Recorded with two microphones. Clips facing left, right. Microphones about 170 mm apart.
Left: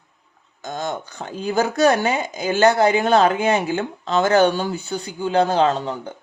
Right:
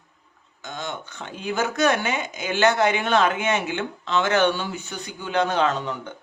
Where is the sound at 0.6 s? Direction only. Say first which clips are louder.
Left 6 dB; 40° left (ahead or behind).